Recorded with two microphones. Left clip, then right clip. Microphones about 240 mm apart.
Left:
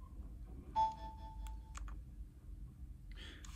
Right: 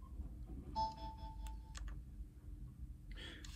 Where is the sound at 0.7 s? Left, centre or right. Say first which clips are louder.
Left 6 dB; centre.